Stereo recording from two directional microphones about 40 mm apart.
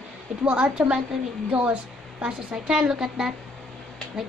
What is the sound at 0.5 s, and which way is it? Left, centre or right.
Speech, right.